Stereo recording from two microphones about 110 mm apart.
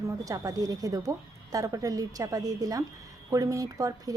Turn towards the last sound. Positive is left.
turn(degrees=-30)  # may be behind; listen again after turning